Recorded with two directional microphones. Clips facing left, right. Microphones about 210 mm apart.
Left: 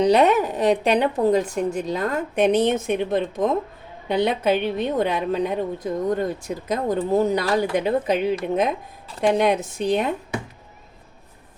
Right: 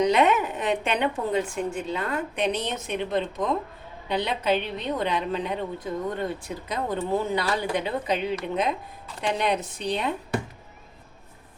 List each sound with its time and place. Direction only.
0.0 s a woman's voice: 35° left (ahead or behind)